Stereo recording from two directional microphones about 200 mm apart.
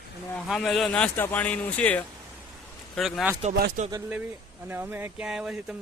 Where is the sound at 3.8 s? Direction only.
40° right (ahead or behind).